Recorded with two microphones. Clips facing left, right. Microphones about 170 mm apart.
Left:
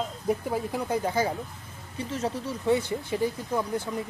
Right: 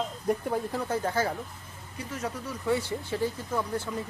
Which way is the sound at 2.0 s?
25° left (ahead or behind).